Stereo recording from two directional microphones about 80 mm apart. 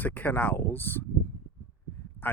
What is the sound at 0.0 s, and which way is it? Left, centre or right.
Speech, left.